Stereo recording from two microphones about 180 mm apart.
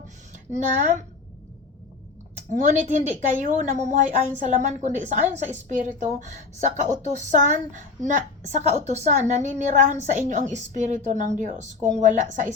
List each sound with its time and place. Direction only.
0.5 s a woman's voice: 40° right (ahead or behind)
2.5 s a woman's voice: 40° right (ahead or behind)